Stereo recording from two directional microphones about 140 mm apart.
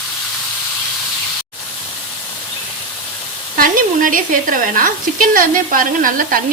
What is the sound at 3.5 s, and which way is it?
Speech, 75° right (ahead or behind).